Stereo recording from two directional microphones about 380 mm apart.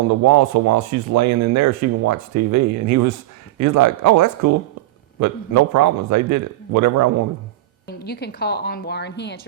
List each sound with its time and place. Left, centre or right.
0.1 s speech: right
7.9 s speech: left